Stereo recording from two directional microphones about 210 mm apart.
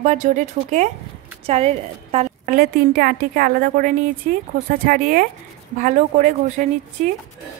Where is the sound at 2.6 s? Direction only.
45° right (ahead or behind).